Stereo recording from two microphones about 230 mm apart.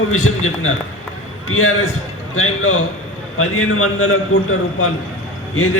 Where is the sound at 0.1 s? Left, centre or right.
Left.